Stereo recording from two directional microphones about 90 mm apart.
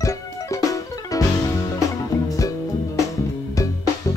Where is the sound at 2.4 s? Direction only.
40° left (ahead or behind).